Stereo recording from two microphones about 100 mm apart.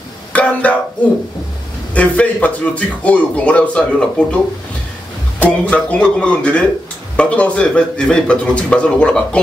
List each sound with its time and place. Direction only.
0.3 s a sound: 15° left (ahead or behind)
2.0 s a man's voice: 15° left (ahead or behind)
5.4 s a man's voice: 10° left (ahead or behind)